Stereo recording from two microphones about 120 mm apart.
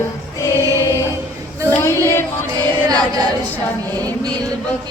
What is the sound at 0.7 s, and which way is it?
Choir, 25° left (ahead or behind).